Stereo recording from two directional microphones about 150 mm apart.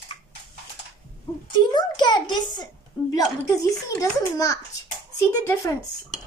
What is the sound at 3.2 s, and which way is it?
Speech, 20° left (ahead or behind).